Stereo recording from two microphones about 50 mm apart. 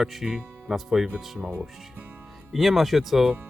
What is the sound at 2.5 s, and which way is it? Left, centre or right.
Speech, centre.